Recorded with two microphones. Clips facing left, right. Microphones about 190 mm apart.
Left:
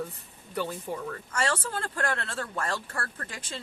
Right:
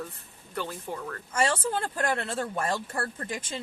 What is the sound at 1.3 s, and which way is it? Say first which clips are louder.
Speech: right 4 dB; 20° right (ahead or behind).